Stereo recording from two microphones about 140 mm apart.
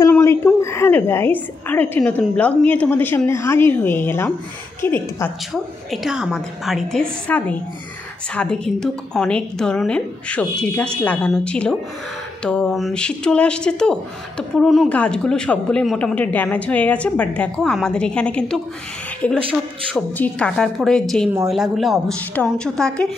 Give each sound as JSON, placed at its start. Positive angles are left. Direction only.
{"t": 0.1, "sound": "a sound", "side_deg": 20}
{"t": 0.6, "sound": "speech", "side_deg": 20}
{"t": 5.5, "sound": "a woman's voice", "side_deg": -5}